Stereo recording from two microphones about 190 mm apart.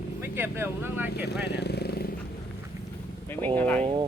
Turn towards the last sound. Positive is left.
turn(degrees=10)  # may be behind; listen again after turning